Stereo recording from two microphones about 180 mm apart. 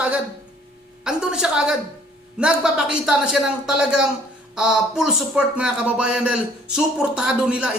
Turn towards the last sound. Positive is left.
turn(degrees=-5)  # may be behind; listen again after turning